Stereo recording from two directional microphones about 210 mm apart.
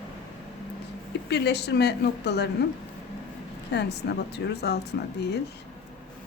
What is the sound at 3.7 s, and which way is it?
Speech, 55° left (ahead or behind).